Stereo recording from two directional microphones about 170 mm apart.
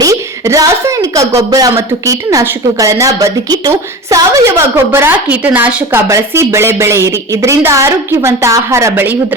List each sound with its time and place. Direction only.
0.0 s a woman's voice: 20° right (ahead or behind)